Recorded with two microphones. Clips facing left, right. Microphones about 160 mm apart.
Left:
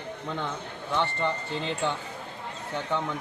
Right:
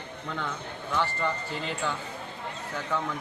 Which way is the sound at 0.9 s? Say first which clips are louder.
Left 1 dB; 25° left (ahead or behind).